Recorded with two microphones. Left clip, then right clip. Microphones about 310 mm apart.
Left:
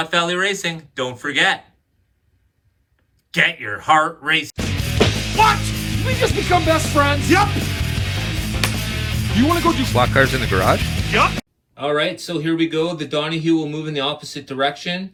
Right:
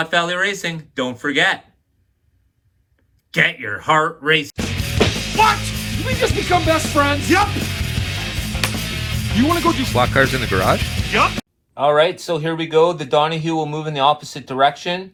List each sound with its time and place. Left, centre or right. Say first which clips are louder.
0.0 s speech: right 1 dB; centre
3.3 s speech: even; centre